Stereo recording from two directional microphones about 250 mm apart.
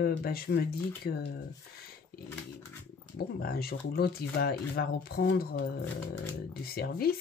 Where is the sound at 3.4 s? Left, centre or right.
Left.